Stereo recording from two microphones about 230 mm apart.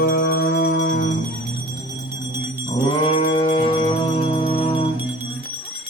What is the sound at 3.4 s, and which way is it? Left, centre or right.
Music, left.